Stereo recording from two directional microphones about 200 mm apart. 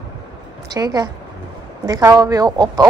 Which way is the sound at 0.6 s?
20° right (ahead or behind).